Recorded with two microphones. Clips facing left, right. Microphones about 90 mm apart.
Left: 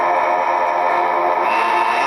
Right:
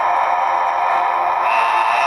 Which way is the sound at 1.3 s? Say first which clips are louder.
Even; 5° left (ahead or behind).